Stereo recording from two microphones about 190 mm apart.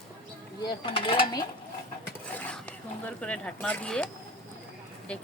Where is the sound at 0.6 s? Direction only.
25° left (ahead or behind).